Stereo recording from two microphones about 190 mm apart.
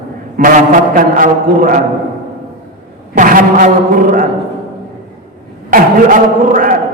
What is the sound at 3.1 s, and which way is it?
A man's voice, 45° right (ahead or behind).